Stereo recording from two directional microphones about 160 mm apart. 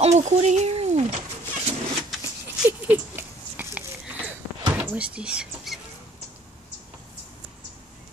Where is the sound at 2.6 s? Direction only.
10° right (ahead or behind).